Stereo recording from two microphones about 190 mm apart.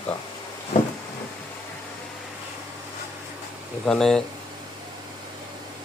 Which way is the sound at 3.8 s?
Centre (ahead or behind).